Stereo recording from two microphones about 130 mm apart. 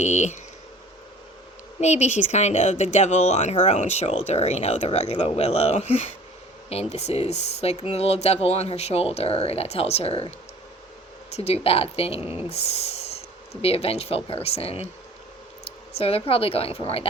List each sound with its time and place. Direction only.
0.0 s speech: 65° left (ahead or behind)
1.8 s speech: 60° left (ahead or behind)
11.3 s speech: 50° left (ahead or behind)